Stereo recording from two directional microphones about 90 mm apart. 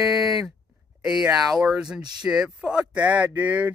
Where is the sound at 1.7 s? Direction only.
10° right (ahead or behind).